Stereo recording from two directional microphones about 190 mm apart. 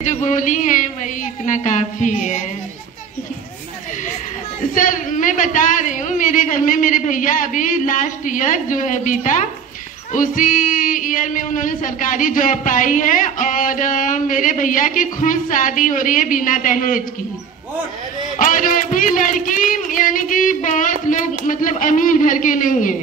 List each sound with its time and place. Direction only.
0.0 s a sound: 40° left (ahead or behind)
1.4 s a woman's voice: 40° left (ahead or behind)
4.7 s music: 45° left (ahead or behind)
18.4 s music: 45° left (ahead or behind)